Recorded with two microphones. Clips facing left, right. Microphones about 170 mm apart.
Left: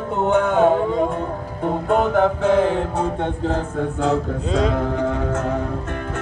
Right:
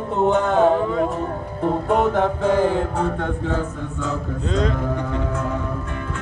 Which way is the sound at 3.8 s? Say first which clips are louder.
Left 7 dB; 70° left (ahead or behind).